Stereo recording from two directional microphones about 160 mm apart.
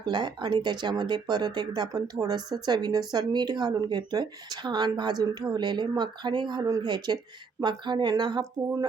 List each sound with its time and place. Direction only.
0.0 s speech: 30° right (ahead or behind)